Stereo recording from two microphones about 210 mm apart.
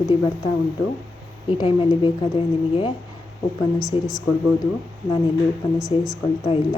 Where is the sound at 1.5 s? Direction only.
25° left (ahead or behind).